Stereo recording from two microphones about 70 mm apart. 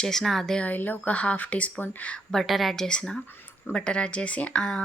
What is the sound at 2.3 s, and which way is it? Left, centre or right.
Speech, centre.